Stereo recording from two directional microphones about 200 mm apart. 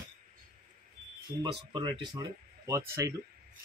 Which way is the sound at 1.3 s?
15° right (ahead or behind).